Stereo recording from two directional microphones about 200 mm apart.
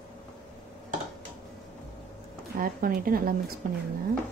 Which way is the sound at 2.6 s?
45° right (ahead or behind).